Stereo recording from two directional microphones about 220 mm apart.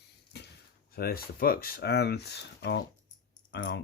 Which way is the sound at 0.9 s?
45° left (ahead or behind).